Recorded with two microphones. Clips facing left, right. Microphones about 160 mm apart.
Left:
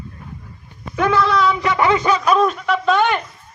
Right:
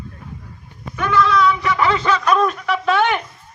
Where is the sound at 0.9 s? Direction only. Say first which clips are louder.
Left 1 dB; 60° left (ahead or behind).